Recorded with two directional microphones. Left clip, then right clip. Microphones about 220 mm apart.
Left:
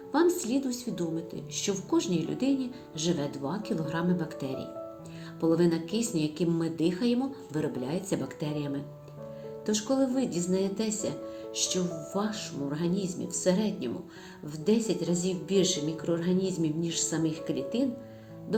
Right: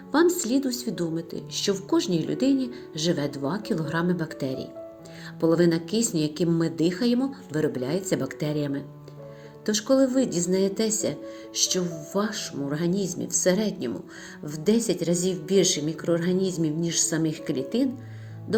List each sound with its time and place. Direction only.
0.1 s a woman's voice: 35° right (ahead or behind)